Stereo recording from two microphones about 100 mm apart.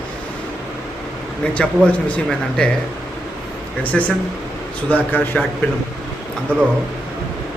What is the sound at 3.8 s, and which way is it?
A man's voice, 15° left (ahead or behind).